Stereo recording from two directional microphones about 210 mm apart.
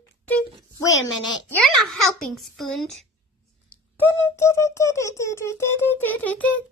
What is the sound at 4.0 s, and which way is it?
Speech, 15° left (ahead or behind).